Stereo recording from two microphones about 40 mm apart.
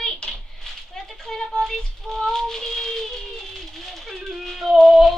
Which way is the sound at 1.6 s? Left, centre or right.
Centre.